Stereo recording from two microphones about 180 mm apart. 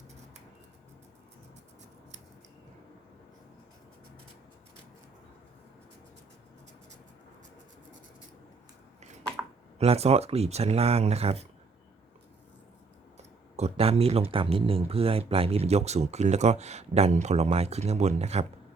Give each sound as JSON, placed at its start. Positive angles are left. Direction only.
{"t": 9.7, "sound": "speech", "side_deg": -35}
{"t": 13.6, "sound": "speech", "side_deg": -35}